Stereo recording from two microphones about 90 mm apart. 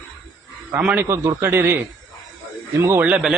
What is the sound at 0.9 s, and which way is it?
Speech, 30° right (ahead or behind).